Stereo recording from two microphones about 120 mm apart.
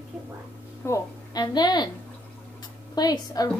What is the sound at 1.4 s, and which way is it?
A woman's voice, 35° left (ahead or behind).